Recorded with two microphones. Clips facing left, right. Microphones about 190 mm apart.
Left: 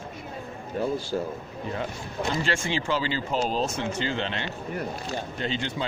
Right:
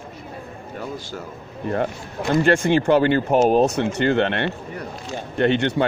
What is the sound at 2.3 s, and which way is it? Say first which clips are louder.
A man's voice: right 12 dB; 55° right (ahead or behind).